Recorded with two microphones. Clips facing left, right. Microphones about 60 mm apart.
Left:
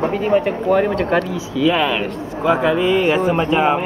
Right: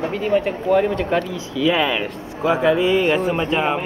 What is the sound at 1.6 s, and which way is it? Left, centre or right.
Speech, centre.